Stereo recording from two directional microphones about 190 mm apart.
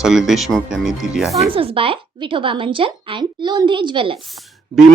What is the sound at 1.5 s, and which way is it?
A woman's voice, 30° right (ahead or behind).